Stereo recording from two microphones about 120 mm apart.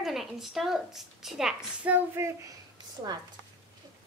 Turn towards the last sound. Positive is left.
turn(degrees=-30)  # may be behind; listen again after turning